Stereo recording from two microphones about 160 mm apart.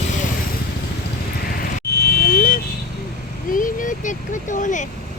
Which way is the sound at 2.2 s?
60° left (ahead or behind).